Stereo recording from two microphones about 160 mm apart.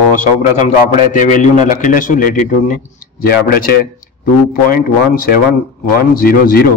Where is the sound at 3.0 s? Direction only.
65° left (ahead or behind).